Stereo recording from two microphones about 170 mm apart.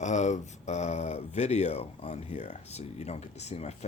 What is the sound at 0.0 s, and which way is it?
Speech, 45° left (ahead or behind).